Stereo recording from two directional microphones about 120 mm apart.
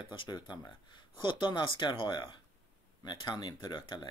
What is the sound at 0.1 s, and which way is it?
Speech, 40° left (ahead or behind).